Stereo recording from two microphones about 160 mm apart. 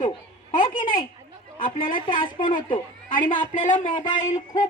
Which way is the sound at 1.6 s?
60° left (ahead or behind).